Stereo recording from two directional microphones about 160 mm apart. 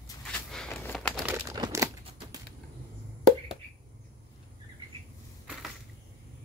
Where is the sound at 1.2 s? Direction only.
25° right (ahead or behind).